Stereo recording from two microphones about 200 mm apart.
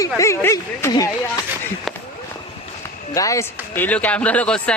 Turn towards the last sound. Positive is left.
turn(degrees=5)  # may be behind; listen again after turning